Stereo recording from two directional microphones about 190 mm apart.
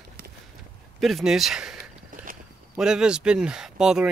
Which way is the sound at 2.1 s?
45° right (ahead or behind).